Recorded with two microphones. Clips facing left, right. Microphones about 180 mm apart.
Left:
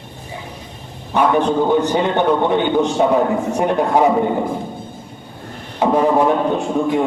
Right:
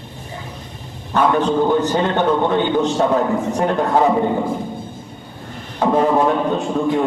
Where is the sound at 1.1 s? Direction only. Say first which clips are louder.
Left 1 dB; 15° left (ahead or behind).